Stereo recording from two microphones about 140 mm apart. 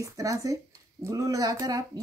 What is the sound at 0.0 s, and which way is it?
Speech, 25° right (ahead or behind).